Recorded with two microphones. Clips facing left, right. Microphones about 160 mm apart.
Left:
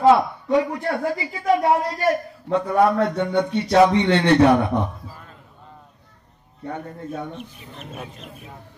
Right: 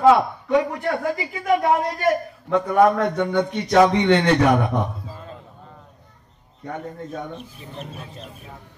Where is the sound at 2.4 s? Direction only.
30° left (ahead or behind).